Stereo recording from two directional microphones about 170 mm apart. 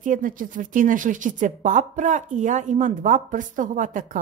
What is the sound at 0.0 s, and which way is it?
Speech, 50° right (ahead or behind).